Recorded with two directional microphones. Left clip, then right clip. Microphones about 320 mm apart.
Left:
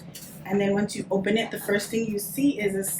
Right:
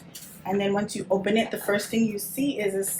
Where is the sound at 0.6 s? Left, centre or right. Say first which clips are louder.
Left 2 dB; centre.